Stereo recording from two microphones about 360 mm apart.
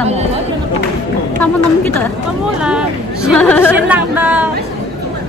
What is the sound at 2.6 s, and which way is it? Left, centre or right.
Chatter, centre.